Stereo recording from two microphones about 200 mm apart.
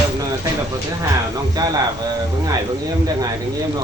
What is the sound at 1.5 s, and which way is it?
Speech, 20° right (ahead or behind).